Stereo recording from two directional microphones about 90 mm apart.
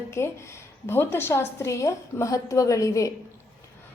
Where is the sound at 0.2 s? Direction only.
30° left (ahead or behind).